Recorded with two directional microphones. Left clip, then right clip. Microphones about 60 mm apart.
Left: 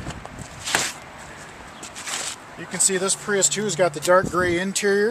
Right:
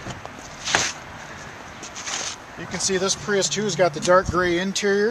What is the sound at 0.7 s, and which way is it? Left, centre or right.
Chopping, centre.